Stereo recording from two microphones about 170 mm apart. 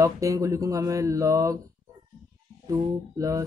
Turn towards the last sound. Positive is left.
turn(degrees=-20)  # may be behind; listen again after turning